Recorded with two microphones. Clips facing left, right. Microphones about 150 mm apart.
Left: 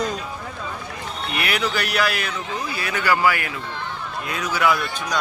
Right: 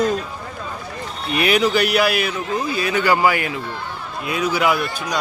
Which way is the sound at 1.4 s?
20° right (ahead or behind).